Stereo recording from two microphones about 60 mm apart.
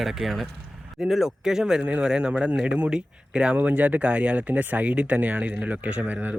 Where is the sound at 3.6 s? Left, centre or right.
Right.